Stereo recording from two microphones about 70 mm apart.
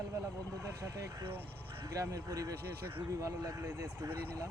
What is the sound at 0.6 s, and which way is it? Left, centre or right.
Speech, right.